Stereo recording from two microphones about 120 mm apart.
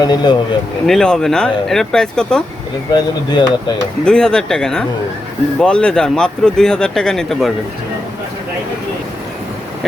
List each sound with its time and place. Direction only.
0.0 s speech: 35° left (ahead or behind)
0.9 s speech: 5° left (ahead or behind)
2.9 s speech: 35° left (ahead or behind)
4.0 s speech: 5° left (ahead or behind)